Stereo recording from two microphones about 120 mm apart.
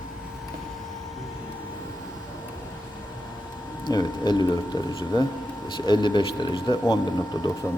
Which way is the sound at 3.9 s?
35° left (ahead or behind).